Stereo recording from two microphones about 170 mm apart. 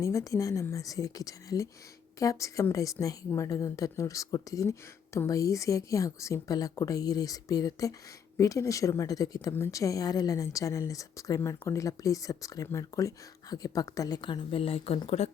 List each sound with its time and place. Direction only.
0.0 s speech: 20° left (ahead or behind); by 15.3 s 35° left (ahead or behind)